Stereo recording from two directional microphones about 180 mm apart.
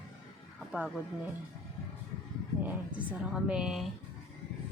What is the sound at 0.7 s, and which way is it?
Speech, 5° right (ahead or behind).